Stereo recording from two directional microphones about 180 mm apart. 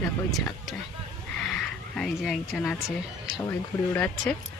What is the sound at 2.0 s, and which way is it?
Speech, 5° left (ahead or behind).